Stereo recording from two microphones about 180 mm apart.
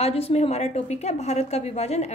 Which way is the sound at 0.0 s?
35° left (ahead or behind).